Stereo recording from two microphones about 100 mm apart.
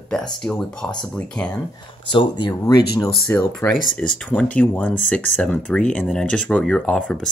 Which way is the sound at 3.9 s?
15° left (ahead or behind).